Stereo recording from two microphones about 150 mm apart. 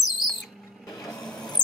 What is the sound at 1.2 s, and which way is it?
Printer, 5° left (ahead or behind).